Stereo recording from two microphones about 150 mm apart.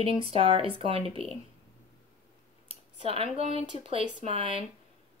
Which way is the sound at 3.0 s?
40° right (ahead or behind).